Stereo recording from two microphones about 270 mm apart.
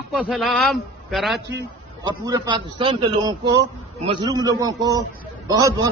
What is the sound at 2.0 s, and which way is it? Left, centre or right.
A man's voice, centre.